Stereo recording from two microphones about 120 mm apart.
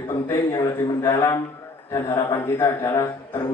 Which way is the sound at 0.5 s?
40° left (ahead or behind).